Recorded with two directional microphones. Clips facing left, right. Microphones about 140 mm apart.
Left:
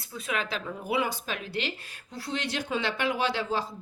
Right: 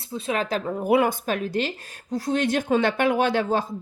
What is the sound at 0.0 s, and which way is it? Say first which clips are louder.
Speech: right 6 dB; 30° right (ahead or behind).